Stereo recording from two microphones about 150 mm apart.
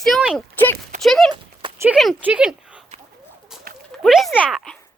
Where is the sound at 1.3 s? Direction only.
30° right (ahead or behind).